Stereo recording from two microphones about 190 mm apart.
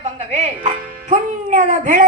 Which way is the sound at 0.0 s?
35° right (ahead or behind).